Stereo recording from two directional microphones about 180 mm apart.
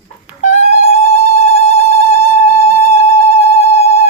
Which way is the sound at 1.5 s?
35° left (ahead or behind).